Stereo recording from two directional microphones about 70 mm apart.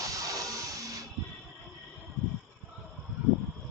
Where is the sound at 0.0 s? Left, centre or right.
Right.